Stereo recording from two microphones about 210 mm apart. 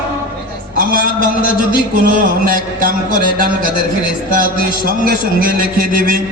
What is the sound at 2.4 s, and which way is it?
A man's voice, 40° right (ahead or behind).